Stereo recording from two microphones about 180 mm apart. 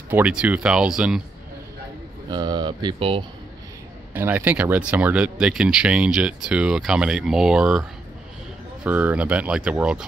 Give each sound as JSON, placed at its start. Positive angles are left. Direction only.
{"t": 0.1, "sound": "speech", "side_deg": -5}
{"t": 2.2, "sound": "speech", "side_deg": -25}
{"t": 4.1, "sound": "speech", "side_deg": -10}
{"t": 8.8, "sound": "speech", "side_deg": -10}